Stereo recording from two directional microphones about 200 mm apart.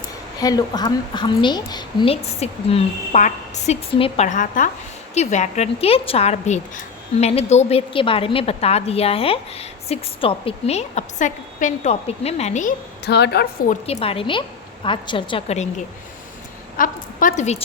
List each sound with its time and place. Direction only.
0.3 s a woman's voice: 20° left (ahead or behind); by 12.7 s 35° left (ahead or behind)
13.1 s a woman's voice: 55° left (ahead or behind)
13.7 s a woman's voice: 30° left (ahead or behind)
16.7 s a woman's voice: 45° left (ahead or behind)